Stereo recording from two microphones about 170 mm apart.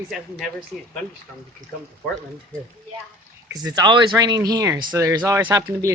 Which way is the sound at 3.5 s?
25° right (ahead or behind).